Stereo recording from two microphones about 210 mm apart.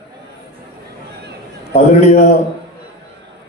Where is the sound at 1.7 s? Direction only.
30° left (ahead or behind).